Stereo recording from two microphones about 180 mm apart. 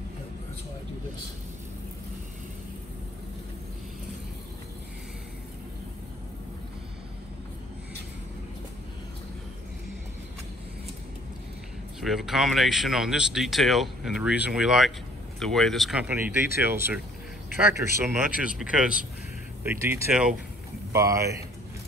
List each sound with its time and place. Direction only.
12.0 s speech: centre (ahead or behind)
19.6 s speech: 10° right (ahead or behind)